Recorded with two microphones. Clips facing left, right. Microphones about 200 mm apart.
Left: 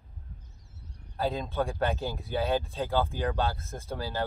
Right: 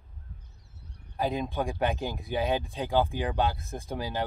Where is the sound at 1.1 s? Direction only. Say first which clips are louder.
Right 1 dB; 15° right (ahead or behind).